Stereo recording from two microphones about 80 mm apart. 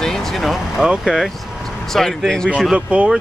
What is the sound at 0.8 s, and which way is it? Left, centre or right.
Speech, centre.